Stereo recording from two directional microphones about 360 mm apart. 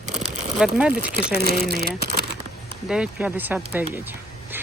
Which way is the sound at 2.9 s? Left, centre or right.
Centre.